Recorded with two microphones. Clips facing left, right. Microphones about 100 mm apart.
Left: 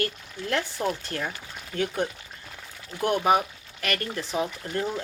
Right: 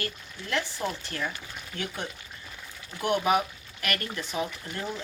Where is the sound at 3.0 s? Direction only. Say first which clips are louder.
Left 3 dB; 40° left (ahead or behind).